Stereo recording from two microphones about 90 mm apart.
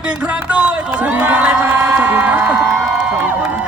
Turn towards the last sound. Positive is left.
turn(degrees=-15)  # may be behind; listen again after turning